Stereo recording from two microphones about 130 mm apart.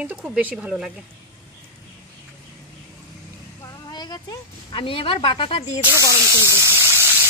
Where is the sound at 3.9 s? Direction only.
30° left (ahead or behind).